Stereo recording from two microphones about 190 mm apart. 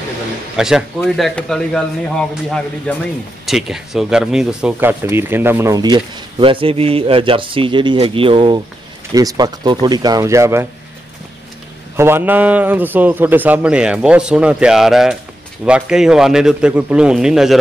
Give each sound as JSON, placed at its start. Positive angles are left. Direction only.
{"t": 0.6, "sound": "a man's voice", "side_deg": -5}
{"t": 12.0, "sound": "a man's voice", "side_deg": -10}